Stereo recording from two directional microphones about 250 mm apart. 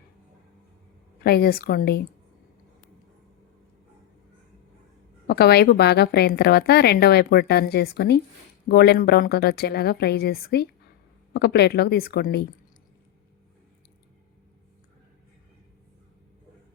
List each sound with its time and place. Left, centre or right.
1.2 s a woman's voice: left
5.3 s a woman's voice: left